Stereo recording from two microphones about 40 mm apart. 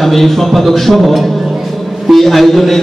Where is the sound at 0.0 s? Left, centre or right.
Centre.